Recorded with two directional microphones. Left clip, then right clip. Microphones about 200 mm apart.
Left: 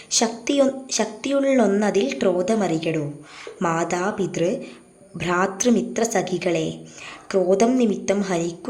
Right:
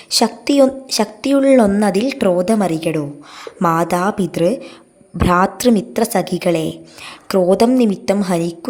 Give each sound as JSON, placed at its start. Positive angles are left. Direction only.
{"t": 0.1, "sound": "a woman's voice", "side_deg": -40}